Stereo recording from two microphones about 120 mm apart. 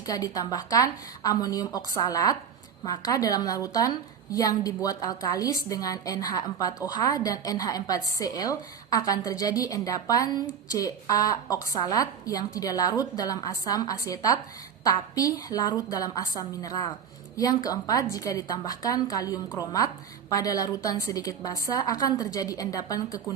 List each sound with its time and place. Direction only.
0.0 s a woman's voice: 30° left (ahead or behind)